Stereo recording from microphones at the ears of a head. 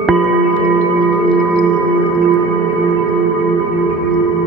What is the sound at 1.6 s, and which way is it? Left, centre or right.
Singing bowl, right.